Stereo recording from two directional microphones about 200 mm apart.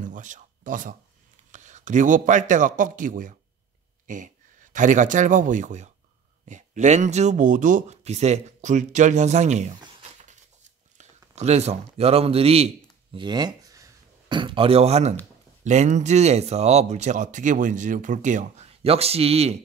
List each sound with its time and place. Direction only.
0.0 s speech: 40° right (ahead or behind)
10.6 s a sound: 35° right (ahead or behind)
15.6 s speech: 35° right (ahead or behind)